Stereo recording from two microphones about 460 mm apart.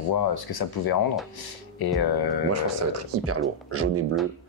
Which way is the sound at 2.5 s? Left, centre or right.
Right.